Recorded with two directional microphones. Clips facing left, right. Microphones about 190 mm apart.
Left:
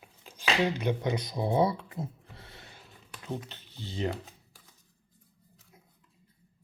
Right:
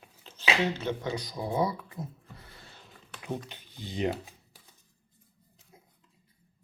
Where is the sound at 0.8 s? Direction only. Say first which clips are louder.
Left 3 dB; 15° left (ahead or behind).